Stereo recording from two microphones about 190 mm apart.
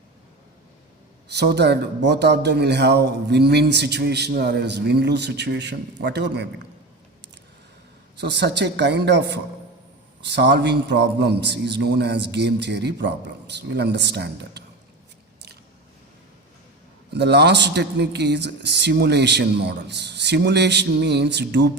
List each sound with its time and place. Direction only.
1.3 s speech: 60° right (ahead or behind)
8.2 s speech: 60° right (ahead or behind)
17.1 s speech: 60° right (ahead or behind)